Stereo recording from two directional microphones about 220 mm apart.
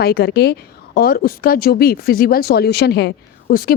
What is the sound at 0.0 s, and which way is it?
A woman's voice, 45° left (ahead or behind).